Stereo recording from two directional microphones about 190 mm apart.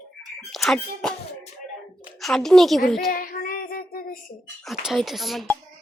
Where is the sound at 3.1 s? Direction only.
45° left (ahead or behind).